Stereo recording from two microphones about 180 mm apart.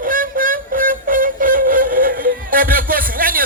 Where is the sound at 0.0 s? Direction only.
50° right (ahead or behind).